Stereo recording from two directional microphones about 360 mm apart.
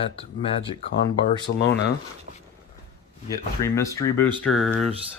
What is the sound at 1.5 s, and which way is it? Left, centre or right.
Speech, left.